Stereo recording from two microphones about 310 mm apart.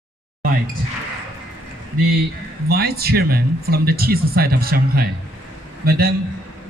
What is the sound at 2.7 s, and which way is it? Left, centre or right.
Speech, right.